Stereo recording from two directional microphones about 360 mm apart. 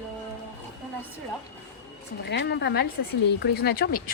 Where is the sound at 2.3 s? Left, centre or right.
Left.